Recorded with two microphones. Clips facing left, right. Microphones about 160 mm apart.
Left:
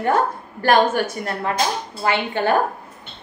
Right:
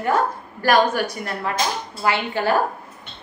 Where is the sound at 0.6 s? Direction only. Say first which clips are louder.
Left 1 dB; 25° left (ahead or behind).